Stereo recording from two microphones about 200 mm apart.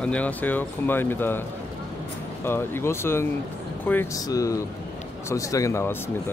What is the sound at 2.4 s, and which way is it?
Speech, 10° left (ahead or behind).